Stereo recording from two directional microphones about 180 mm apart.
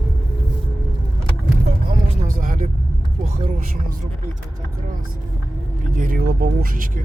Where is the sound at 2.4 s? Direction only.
50° right (ahead or behind).